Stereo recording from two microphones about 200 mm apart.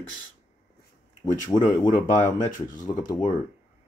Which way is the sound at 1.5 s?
20° left (ahead or behind).